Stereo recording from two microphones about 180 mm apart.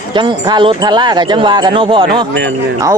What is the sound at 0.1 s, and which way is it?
A man's voice, 25° right (ahead or behind).